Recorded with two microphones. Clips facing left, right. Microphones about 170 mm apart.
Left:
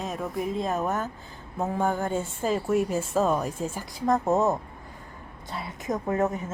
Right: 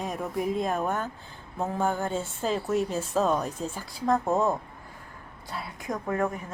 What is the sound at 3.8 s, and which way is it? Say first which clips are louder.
Speech: left 1 dB; 20° left (ahead or behind).